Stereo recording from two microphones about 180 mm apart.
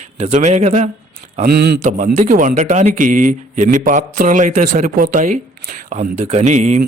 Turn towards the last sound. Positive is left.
turn(degrees=-40)  # may be behind; listen again after turning